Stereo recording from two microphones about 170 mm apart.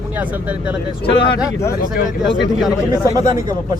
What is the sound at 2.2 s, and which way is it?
Speech, 90° left.